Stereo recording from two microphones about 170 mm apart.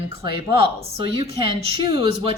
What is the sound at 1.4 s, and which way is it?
Speech, 30° right (ahead or behind).